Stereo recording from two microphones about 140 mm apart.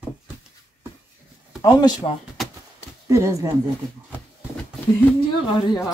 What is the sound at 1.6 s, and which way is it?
Speech, 30° left (ahead or behind).